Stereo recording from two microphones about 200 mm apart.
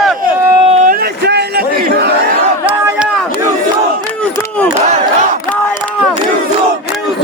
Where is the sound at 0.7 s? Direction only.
35° right (ahead or behind).